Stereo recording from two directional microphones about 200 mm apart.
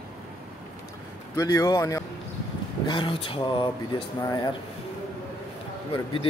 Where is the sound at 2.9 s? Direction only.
25° left (ahead or behind).